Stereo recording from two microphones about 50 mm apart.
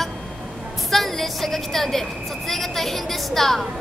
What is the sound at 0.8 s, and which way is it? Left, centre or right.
A woman's voice, centre.